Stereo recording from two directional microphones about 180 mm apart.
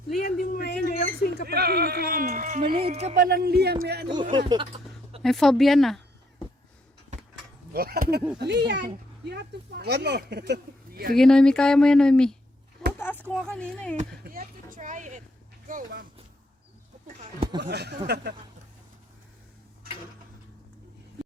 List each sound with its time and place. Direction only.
0.2 s a sound: 55° left (ahead or behind)
1.5 s speech: 60° right (ahead or behind); by 2.7 s 45° right (ahead or behind)
2.7 s speech: 35° right (ahead or behind)
3.2 s speech: 60° right (ahead or behind)
4.1 s speech: 25° right (ahead or behind)
5.2 s speech: centre (ahead or behind)
7.7 s speech: 55° right (ahead or behind)
8.4 s speech: 70° right (ahead or behind)
11.1 s speech: 5° left (ahead or behind)
14.1 s speech: 55° right (ahead or behind)
17.6 s speech: 65° right (ahead or behind)